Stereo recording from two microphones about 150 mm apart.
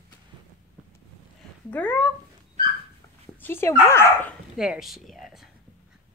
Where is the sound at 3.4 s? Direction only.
15° left (ahead or behind).